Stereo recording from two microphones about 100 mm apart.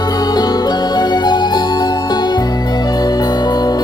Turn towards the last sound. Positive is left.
turn(degrees=40)  # may be behind; listen again after turning